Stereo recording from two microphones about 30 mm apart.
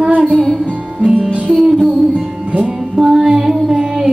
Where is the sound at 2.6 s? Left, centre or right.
Centre.